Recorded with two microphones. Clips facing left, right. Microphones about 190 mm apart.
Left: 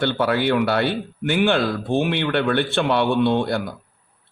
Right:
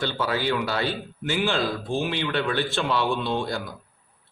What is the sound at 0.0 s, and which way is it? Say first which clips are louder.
Speech: left 6 dB; 60° left (ahead or behind).